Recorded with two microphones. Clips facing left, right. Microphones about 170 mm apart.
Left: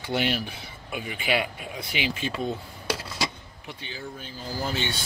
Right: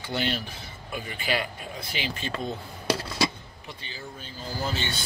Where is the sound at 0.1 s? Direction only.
5° left (ahead or behind).